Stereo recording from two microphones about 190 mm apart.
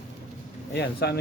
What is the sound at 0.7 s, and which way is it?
Speech, 60° left (ahead or behind).